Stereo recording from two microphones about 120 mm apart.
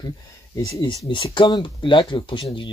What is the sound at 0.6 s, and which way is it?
Speech, 25° left (ahead or behind).